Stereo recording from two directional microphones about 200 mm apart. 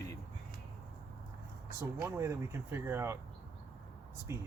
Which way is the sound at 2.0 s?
15° right (ahead or behind).